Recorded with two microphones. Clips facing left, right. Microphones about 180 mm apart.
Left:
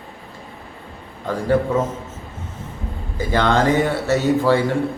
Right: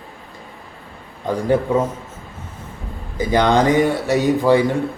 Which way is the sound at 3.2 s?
15° right (ahead or behind).